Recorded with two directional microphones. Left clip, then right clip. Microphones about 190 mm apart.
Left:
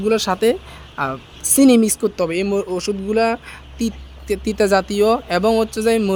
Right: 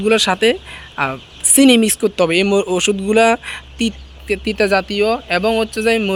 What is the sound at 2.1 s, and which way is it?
Speech, 10° right (ahead or behind).